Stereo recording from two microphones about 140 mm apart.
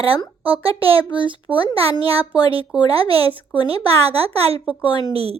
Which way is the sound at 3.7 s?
45° right (ahead or behind).